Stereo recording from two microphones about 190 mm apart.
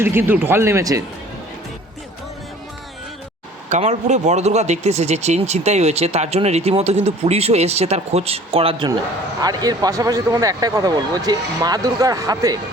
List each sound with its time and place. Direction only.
0.0 s speech: 10° right (ahead or behind)
3.7 s speech: 40° right (ahead or behind); by 12.5 s 20° right (ahead or behind)